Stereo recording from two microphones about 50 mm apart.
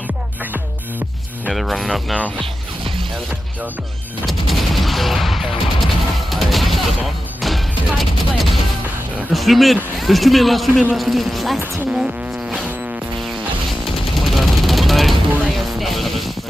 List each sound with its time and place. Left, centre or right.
0.5 s music: right
1.5 s speech: centre
4.3 s gunshot: centre
6.3 s music: centre
9.3 s a sound: centre
9.9 s speech: centre
11.9 s a sound: centre
14.1 s vehicle: centre
15.8 s music: centre